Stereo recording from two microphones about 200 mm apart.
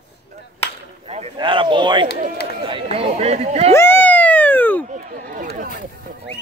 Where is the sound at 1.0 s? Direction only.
30° right (ahead or behind).